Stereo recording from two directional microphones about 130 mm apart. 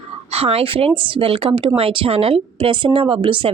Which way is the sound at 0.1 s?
50° right (ahead or behind).